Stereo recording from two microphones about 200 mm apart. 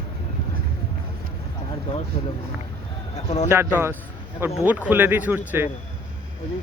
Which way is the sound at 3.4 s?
10° right (ahead or behind).